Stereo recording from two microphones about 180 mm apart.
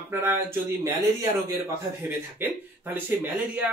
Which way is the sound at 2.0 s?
10° right (ahead or behind).